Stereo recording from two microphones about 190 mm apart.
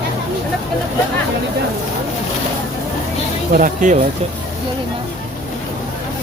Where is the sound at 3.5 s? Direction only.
45° right (ahead or behind).